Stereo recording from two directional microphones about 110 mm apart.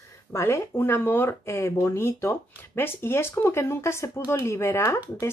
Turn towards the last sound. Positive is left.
turn(degrees=25)  # may be behind; listen again after turning